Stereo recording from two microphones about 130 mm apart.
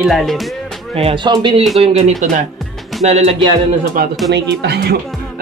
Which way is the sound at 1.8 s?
55° right (ahead or behind).